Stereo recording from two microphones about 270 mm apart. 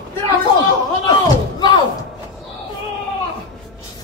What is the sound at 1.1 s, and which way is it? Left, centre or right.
Slam, centre.